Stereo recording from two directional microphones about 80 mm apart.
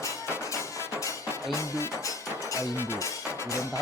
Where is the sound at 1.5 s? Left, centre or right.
Left.